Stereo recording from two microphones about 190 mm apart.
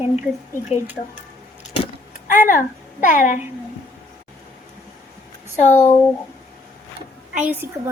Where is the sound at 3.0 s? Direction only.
40° left (ahead or behind).